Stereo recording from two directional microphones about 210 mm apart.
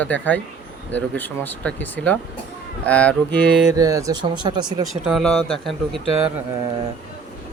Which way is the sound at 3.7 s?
15° right (ahead or behind).